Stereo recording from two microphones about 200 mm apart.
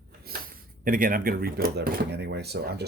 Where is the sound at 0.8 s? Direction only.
45° right (ahead or behind).